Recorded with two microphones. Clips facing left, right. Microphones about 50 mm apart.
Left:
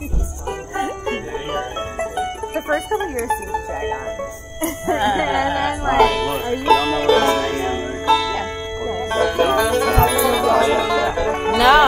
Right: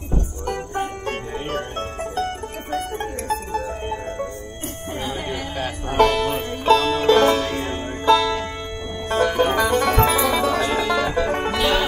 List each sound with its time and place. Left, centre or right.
1.0 s music: centre
2.5 s music: left
4.8 s music: left
5.9 s music: centre